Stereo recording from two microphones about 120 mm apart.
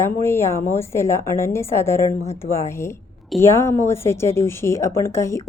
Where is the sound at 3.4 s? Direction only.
20° left (ahead or behind).